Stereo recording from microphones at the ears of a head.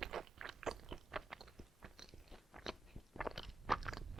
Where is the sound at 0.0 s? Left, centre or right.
Right.